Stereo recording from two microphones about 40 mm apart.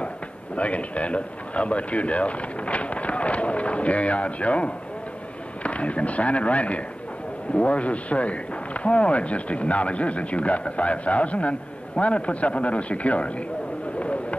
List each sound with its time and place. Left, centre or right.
0.6 s speech: left